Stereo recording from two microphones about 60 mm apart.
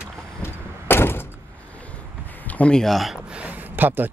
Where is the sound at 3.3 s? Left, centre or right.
Right.